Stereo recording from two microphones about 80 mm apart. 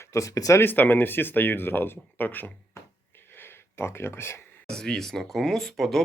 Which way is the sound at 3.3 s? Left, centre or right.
Left.